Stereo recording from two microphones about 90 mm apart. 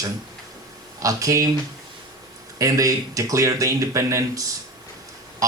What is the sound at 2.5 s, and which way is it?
Speech, 40° right (ahead or behind).